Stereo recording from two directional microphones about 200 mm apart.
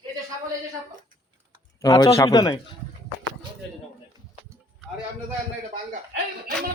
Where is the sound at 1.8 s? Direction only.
20° left (ahead or behind).